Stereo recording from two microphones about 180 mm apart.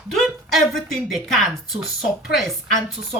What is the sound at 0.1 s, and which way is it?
A woman's voice, centre (ahead or behind).